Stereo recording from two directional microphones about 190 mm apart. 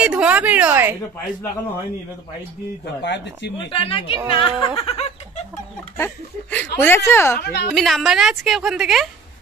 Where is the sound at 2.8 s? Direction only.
65° left (ahead or behind).